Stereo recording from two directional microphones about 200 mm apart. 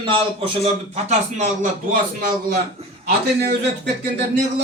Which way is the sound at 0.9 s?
35° right (ahead or behind).